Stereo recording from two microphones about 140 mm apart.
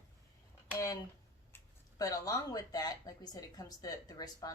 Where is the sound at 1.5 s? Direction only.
25° left (ahead or behind).